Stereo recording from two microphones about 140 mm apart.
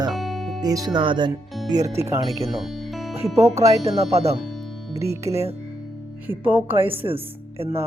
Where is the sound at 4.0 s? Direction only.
50° right (ahead or behind).